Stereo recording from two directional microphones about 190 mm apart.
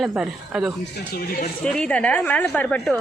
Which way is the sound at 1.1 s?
50° left (ahead or behind).